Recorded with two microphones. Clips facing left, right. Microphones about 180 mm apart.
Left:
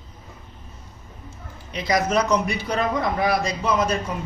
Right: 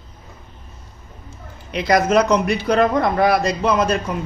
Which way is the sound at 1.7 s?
65° right (ahead or behind).